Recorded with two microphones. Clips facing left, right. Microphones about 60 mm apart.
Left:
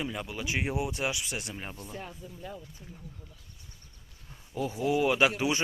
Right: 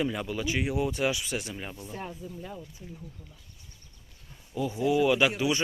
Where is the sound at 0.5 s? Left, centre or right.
Left.